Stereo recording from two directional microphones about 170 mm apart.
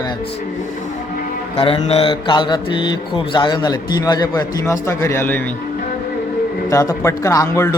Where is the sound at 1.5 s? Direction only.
35° left (ahead or behind); by 5.5 s 10° left (ahead or behind).